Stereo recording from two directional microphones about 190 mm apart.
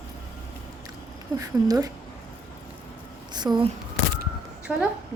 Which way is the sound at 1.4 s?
20° right (ahead or behind).